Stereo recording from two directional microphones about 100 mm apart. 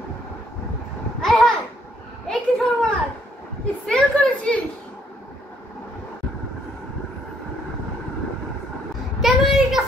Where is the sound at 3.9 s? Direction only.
10° left (ahead or behind).